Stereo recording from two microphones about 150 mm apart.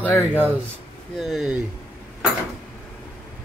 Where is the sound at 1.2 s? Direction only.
Centre (ahead or behind).